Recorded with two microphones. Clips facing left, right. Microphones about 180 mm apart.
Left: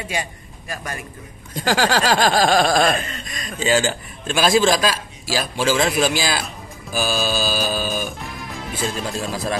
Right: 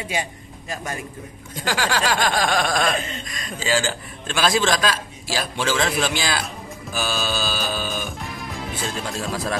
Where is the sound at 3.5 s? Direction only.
20° left (ahead or behind).